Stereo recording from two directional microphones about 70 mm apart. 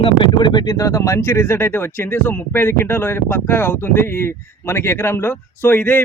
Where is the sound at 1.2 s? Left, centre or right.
Left.